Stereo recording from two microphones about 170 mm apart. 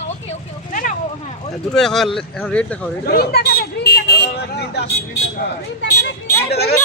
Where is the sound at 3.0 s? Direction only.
65° left (ahead or behind).